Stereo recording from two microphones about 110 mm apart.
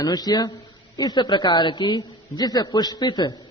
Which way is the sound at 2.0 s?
35° left (ahead or behind).